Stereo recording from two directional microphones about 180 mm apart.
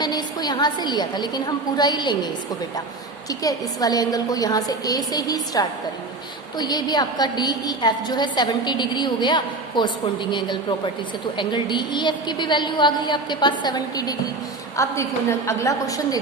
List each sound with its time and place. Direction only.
0.0 s a woman's voice: 20° left (ahead or behind)